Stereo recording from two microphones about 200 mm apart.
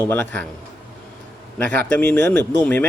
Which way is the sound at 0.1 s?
5° left (ahead or behind).